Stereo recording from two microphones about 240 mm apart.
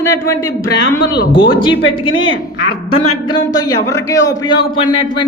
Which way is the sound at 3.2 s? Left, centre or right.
Centre.